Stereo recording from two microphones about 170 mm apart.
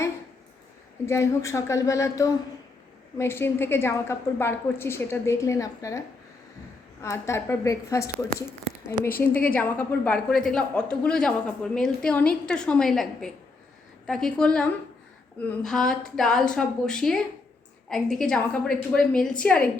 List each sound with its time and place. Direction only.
1.0 s a woman's voice: 15° left (ahead or behind)
7.0 s a woman's voice: 15° left (ahead or behind)